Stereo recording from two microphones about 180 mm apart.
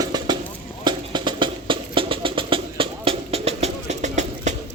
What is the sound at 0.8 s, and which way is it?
Music, 25° right (ahead or behind).